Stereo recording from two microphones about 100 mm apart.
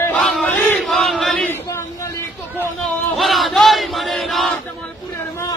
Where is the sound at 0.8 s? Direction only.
Centre (ahead or behind).